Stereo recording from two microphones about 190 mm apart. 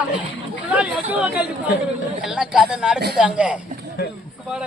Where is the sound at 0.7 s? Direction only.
5° right (ahead or behind).